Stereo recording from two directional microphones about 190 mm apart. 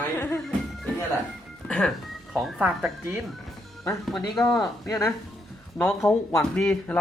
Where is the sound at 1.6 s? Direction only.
5° left (ahead or behind).